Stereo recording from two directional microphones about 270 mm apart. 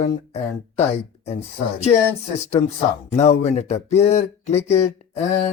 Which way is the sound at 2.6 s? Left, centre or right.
Centre.